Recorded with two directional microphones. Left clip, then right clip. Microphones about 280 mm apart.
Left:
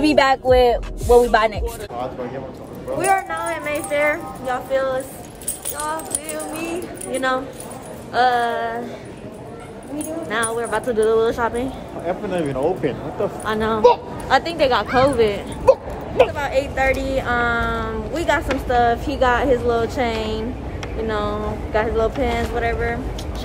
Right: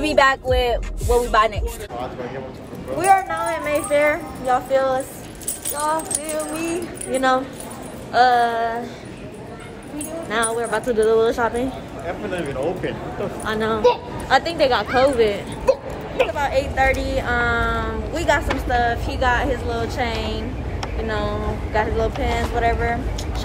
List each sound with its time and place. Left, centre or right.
0.0 s speech: centre
10.3 s speech: centre
12.1 s speech: left
13.4 s speech: centre
14.9 s speech: centre
15.1 s speech: centre
15.6 s a sound: left
16.3 s speech: centre
22.6 s speech: centre